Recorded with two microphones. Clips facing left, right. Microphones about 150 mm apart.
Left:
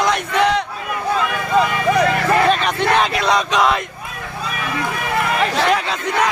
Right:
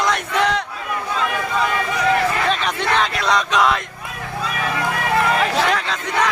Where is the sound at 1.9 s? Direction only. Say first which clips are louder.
Left 2 dB; 50° left (ahead or behind).